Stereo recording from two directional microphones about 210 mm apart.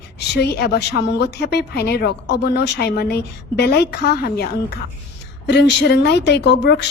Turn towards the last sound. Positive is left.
turn(degrees=55)  # may be behind; listen again after turning